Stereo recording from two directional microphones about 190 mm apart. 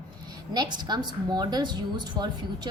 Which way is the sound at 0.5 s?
20° right (ahead or behind).